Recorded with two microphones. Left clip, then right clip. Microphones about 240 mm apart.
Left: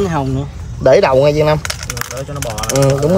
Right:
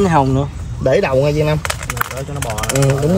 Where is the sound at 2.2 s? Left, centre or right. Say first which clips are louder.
Even; right.